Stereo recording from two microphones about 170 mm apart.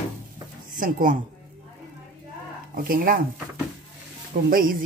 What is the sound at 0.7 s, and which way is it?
Speech, 55° right (ahead or behind).